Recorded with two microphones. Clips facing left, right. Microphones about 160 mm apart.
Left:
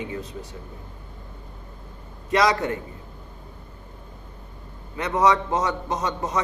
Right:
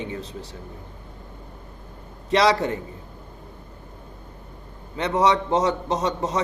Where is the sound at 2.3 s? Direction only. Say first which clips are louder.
Right 2 dB; 30° right (ahead or behind).